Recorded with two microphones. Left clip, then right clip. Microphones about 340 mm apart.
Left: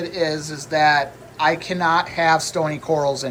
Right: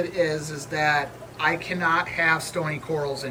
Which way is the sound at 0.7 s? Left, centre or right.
Centre.